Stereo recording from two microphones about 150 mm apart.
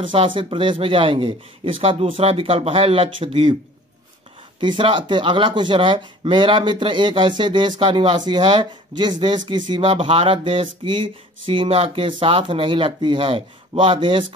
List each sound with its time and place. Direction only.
0.0 s speech: 35° right (ahead or behind)
4.6 s speech: 35° right (ahead or behind)